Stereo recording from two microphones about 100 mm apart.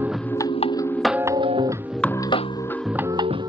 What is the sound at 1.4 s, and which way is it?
Music, 55° right (ahead or behind).